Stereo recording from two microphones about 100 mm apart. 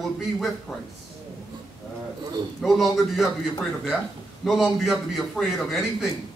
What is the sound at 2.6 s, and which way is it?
Speech, centre (ahead or behind).